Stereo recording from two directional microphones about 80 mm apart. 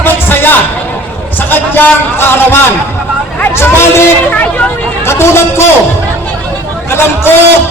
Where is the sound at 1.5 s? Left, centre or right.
Left.